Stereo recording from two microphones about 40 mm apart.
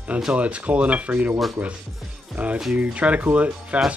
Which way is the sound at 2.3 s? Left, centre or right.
Right.